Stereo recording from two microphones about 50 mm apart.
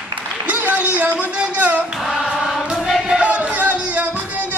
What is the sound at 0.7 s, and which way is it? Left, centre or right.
Music, right.